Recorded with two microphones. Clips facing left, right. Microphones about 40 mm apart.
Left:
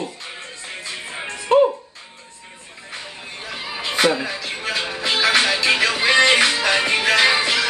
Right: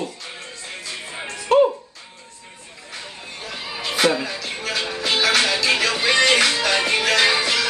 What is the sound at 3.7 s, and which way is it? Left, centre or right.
Music, centre.